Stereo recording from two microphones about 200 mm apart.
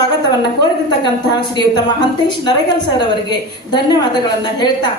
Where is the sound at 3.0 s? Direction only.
20° left (ahead or behind).